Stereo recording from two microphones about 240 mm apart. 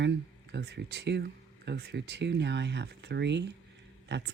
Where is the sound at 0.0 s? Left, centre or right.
Right.